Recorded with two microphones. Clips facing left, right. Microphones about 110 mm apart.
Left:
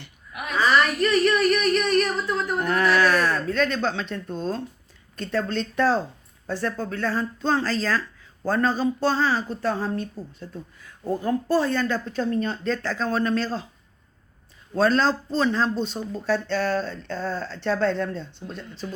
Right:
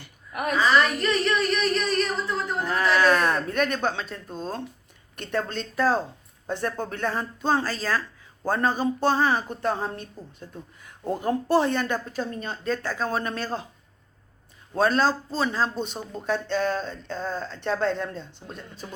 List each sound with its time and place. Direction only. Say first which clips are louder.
0.3 s a woman's voice: right 5 dB; 45° right (ahead or behind)
0.9 s a sound: left 4 dB; 5° left (ahead or behind)
2.8 s a sound: right 1 dB; 20° right (ahead or behind)
4.4 s speech: left 2 dB; 10° right (ahead or behind)
6.5 s a woman's voice: left 1 dB; 20° right (ahead or behind)
11.0 s a woman's voice: left 1 dB; 20° right (ahead or behind)
14.8 s speech: left 1 dB; 10° right (ahead or behind)